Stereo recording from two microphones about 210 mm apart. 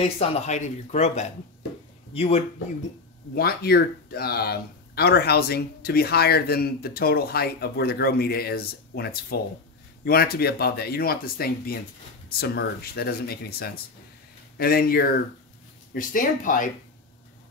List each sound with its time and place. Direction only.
0.0 s speech: 30° left (ahead or behind)
3.3 s speech: 45° left (ahead or behind)